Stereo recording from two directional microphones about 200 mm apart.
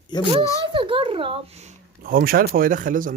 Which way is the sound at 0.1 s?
20° left (ahead or behind).